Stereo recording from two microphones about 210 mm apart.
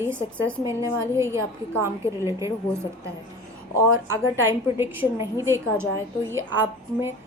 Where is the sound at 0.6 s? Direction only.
15° right (ahead or behind).